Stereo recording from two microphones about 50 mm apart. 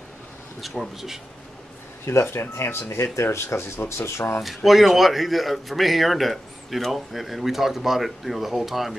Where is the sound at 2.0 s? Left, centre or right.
Left.